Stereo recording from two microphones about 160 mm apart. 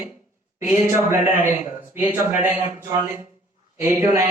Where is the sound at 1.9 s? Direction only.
10° right (ahead or behind).